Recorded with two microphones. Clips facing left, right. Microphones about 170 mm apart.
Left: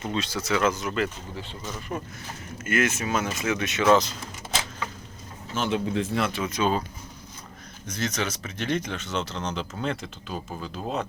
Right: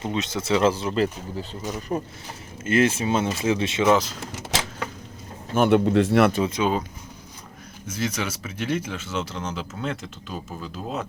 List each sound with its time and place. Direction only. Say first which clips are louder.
0.0 s speech: right 2 dB; 20° right (ahead or behind)
3.8 s speech: even; 10° right (ahead or behind)
5.5 s speech: right 8 dB; 60° right (ahead or behind)
6.4 s speech: right 2 dB; 20° right (ahead or behind)
7.9 s speech: right 1 dB; 10° right (ahead or behind)